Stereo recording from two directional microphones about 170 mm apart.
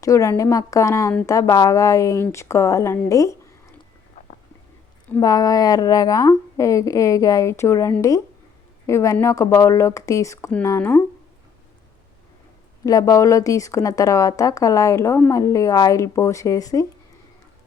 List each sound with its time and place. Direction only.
0.0 s a woman's voice: 20° left (ahead or behind)
5.2 s a woman's voice: 20° left (ahead or behind)
12.8 s a woman's voice: 20° left (ahead or behind)